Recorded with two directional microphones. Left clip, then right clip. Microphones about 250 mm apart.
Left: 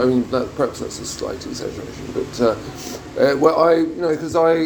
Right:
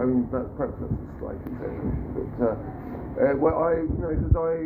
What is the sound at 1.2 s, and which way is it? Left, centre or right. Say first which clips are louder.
Speech: left 9 dB; left.